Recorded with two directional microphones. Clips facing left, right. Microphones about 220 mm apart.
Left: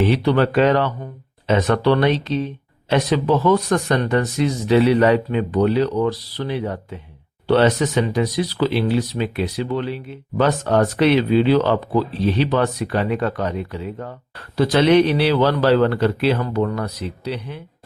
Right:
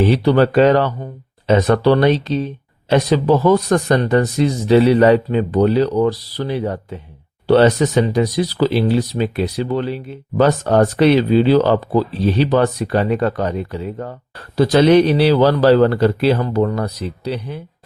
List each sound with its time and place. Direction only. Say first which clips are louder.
0.0 s speech: right 3 dB; 35° right (ahead or behind)